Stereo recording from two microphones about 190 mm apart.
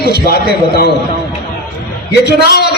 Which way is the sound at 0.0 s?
55° left (ahead or behind).